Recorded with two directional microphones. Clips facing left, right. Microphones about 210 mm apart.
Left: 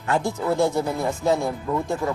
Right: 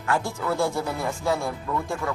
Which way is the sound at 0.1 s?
20° left (ahead or behind).